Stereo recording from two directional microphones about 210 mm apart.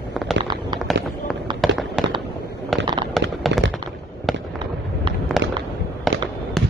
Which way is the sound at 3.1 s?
Centre (ahead or behind).